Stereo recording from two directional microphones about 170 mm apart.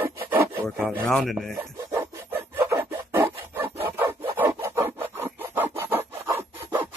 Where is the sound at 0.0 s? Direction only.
10° right (ahead or behind).